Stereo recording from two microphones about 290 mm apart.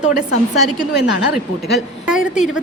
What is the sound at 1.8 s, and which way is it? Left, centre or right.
Speech, centre.